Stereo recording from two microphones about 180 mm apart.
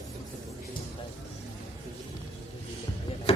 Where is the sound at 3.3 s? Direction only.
35° left (ahead or behind).